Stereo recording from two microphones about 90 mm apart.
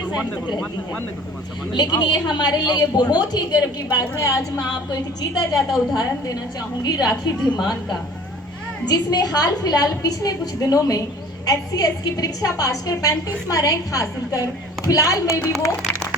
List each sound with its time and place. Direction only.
1.7 s a woman's voice: 55° left (ahead or behind)
5.3 s a woman's voice: 5° right (ahead or behind)
6.8 s a woman's voice: 45° left (ahead or behind)